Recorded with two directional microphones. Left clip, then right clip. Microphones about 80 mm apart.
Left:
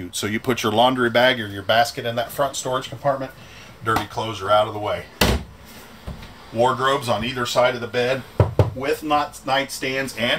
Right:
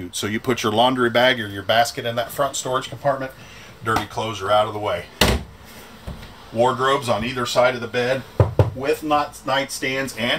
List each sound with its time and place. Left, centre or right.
0.1 s speech: centre
6.5 s speech: centre
8.4 s speech: left